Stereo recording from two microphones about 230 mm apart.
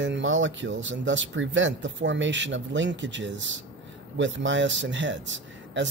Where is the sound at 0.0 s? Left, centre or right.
Right.